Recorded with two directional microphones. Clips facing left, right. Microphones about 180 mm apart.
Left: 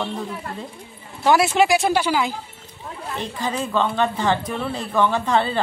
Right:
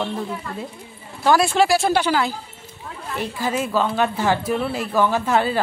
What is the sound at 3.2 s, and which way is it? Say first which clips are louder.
A woman's voice: right 3 dB; 5° right (ahead or behind).